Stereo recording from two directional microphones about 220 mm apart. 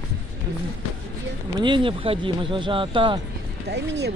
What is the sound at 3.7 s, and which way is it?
Speech, 50° right (ahead or behind).